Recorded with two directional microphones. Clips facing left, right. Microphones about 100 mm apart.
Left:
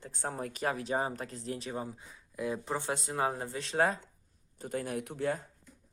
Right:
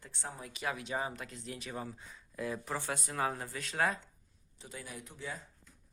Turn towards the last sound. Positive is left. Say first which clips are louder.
# left 11 dB
turn(degrees=55)  # may be behind; listen again after turning